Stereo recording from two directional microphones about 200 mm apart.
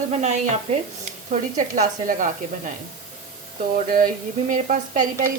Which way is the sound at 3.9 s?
45° right (ahead or behind).